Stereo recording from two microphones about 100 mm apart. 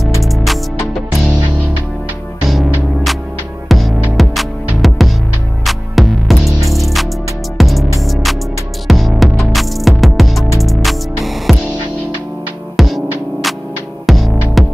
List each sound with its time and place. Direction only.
0.2 s music: centre (ahead or behind)
2.4 s music: centre (ahead or behind)
12.7 s music: centre (ahead or behind)